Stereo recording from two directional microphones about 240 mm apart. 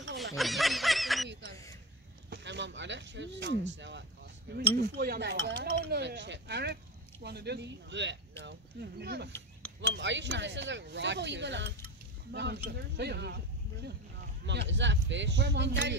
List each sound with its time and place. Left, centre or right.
0.2 s snicker: centre
2.2 s speech: right
14.4 s speech: right